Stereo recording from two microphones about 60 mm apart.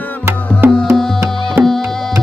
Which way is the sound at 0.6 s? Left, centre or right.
Right.